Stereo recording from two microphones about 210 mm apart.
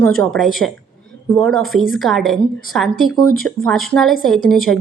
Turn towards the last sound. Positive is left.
turn(degrees=0)  # may be behind; listen again after turning